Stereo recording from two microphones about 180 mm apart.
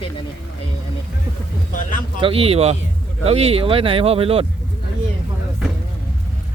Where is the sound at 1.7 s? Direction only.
45° left (ahead or behind).